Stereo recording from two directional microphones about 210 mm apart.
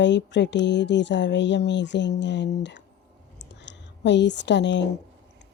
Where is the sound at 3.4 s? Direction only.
55° left (ahead or behind).